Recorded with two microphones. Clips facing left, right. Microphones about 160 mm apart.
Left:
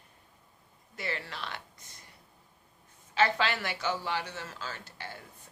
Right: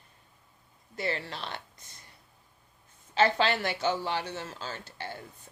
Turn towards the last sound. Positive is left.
turn(degrees=-30)  # may be behind; listen again after turning